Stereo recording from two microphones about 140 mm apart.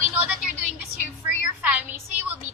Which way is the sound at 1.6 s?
10° right (ahead or behind).